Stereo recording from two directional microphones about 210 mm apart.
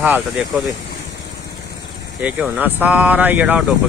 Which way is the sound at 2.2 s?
5° right (ahead or behind).